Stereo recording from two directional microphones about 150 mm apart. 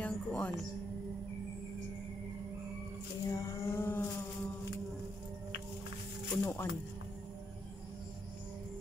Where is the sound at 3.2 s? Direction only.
25° left (ahead or behind).